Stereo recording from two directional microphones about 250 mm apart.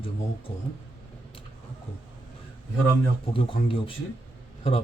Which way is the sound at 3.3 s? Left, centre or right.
Left.